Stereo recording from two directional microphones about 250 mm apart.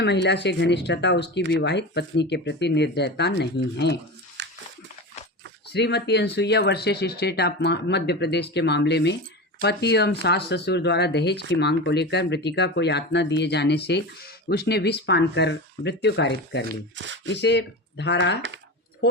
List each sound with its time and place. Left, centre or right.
0.0 s speech: left
4.4 s dog: right
5.7 s speech: left